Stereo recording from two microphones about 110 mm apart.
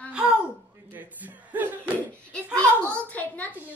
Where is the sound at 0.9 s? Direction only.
15° right (ahead or behind).